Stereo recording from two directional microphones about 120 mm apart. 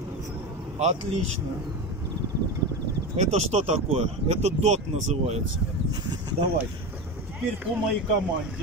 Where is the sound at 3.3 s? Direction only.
65° right (ahead or behind).